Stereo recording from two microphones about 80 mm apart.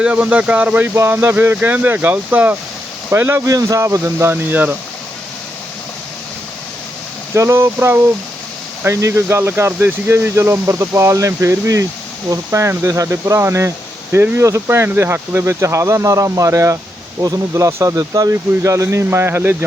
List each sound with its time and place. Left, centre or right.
0.0 s speech: centre
3.4 s speech: right
7.3 s speech: right